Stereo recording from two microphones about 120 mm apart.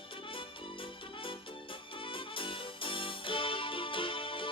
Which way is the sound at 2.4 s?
45° left (ahead or behind).